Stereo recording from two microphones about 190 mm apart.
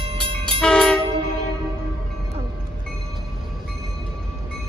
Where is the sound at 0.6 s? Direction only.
5° left (ahead or behind).